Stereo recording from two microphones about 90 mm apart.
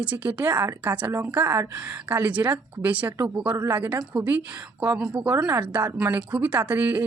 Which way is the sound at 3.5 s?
35° right (ahead or behind).